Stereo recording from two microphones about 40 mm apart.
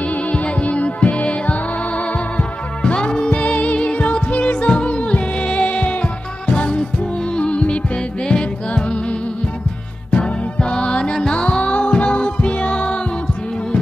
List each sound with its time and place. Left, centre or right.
0.3 s music: left
2.8 s music: left
3.3 s music: left
10.1 s music: left